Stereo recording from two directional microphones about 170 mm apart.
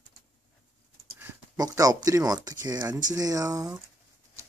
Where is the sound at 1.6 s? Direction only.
20° right (ahead or behind).